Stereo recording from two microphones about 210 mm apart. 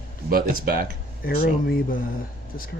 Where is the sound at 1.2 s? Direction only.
45° left (ahead or behind).